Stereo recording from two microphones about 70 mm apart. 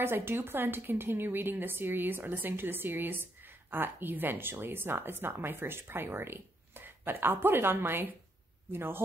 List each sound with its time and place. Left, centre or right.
0.0 s a woman's voice: right